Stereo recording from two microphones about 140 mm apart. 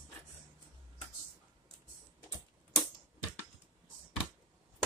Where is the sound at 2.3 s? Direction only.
20° left (ahead or behind).